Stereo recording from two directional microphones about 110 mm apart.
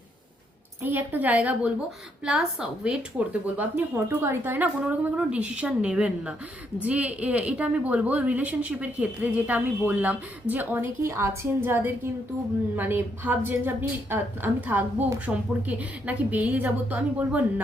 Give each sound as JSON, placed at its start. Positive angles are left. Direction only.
{"t": 0.8, "sound": "a woman's voice", "side_deg": -15}